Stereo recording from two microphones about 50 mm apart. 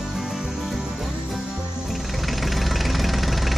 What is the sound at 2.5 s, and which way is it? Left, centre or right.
Engine, centre.